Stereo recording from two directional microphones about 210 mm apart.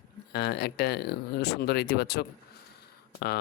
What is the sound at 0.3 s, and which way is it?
Speech, 50° left (ahead or behind).